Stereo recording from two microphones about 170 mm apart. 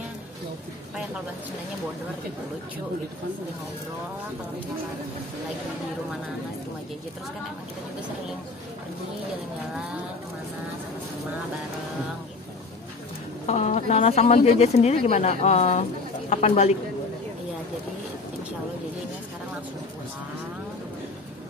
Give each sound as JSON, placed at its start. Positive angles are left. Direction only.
{"t": 13.5, "sound": "speech", "side_deg": 40}